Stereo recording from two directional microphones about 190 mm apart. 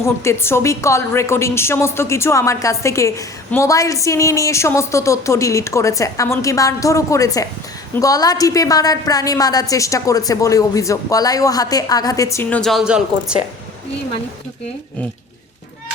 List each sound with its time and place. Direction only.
0.0 s a woman's voice: 15° left (ahead or behind); by 13.4 s 5° right (ahead or behind)